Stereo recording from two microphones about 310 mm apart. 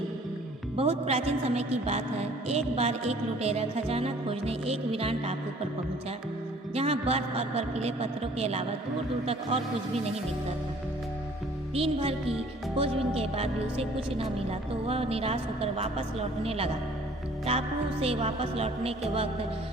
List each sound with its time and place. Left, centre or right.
0.8 s a woman's voice: centre
6.7 s a woman's voice: centre
11.7 s a woman's voice: centre
18.0 s a woman's voice: centre